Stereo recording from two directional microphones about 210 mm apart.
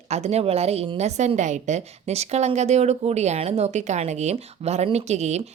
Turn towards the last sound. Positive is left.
turn(degrees=-30)  # may be behind; listen again after turning